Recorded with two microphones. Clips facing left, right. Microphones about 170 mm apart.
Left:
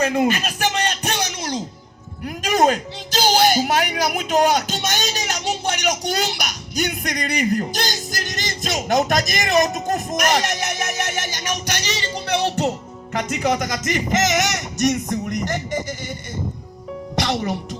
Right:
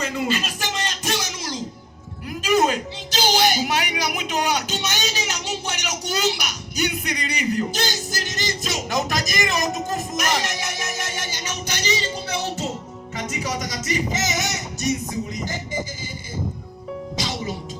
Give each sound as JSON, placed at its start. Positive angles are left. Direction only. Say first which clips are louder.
{"t": 0.0, "sound": "music", "louder": "left 6 dB", "side_deg": 65}
{"t": 2.2, "sound": "music", "louder": "left 2 dB", "side_deg": 50}
{"t": 10.2, "sound": "speech", "louder": "left 6 dB", "side_deg": 55}
{"t": 11.7, "sound": "music", "louder": "even", "side_deg": 65}
{"t": 17.2, "sound": "music", "louder": "left 8 dB", "side_deg": 60}